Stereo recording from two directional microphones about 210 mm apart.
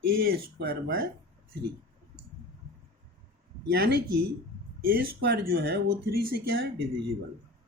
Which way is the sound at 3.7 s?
50° right (ahead or behind).